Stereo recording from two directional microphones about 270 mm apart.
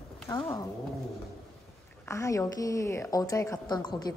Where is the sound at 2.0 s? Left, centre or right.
Centre.